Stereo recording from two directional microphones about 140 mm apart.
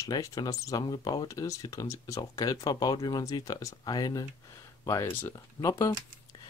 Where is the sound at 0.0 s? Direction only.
25° left (ahead or behind).